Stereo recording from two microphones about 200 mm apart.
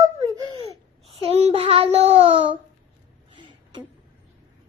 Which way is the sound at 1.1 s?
30° right (ahead or behind).